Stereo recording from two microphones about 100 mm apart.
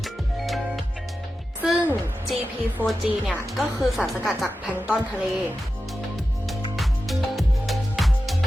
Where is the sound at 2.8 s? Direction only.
20° right (ahead or behind).